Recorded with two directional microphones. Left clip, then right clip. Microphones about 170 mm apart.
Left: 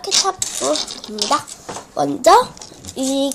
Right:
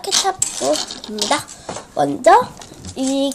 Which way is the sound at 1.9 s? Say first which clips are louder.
Even; centre (ahead or behind).